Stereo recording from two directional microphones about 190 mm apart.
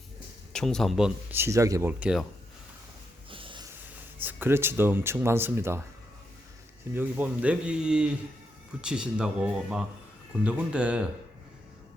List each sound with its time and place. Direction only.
0.5 s speech: centre (ahead or behind)
3.2 s snort: 25° right (ahead or behind)
4.2 s speech: 10° right (ahead or behind)
6.9 s speech: 10° right (ahead or behind)